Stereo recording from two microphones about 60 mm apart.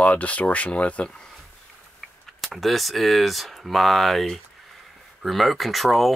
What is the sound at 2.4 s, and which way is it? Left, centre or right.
Speech, centre.